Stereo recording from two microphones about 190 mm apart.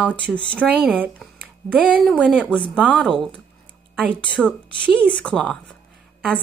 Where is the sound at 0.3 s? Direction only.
Centre (ahead or behind).